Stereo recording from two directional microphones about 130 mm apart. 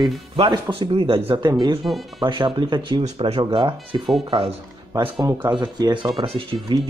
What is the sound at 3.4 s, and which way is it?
Speech, 35° right (ahead or behind).